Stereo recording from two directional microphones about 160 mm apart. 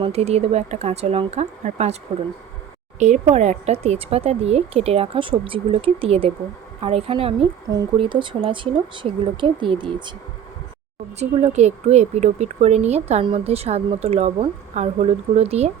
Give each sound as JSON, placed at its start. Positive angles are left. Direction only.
{"t": 0.0, "sound": "speech", "side_deg": -40}
{"t": 3.0, "sound": "speech", "side_deg": -45}
{"t": 11.2, "sound": "speech", "side_deg": -40}